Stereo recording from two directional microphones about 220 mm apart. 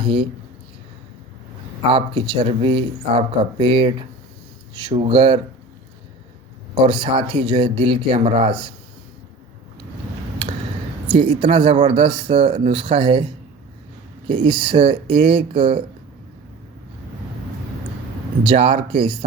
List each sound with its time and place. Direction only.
0.0 s speech: 25° right (ahead or behind)
1.9 s speech: 25° right (ahead or behind)
6.7 s speech: 20° right (ahead or behind)
11.1 s speech: 20° right (ahead or behind)
14.3 s speech: 20° right (ahead or behind)
18.4 s speech: 25° right (ahead or behind)